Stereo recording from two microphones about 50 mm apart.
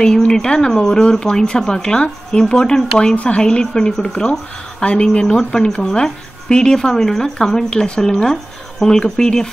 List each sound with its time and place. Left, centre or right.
0.3 s speech: centre